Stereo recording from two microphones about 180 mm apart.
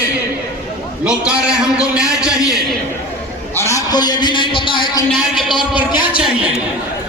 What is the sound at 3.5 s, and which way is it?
A man's voice, 15° left (ahead or behind).